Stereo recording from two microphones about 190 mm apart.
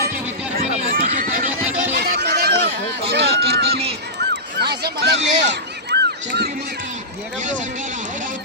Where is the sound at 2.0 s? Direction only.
60° right (ahead or behind).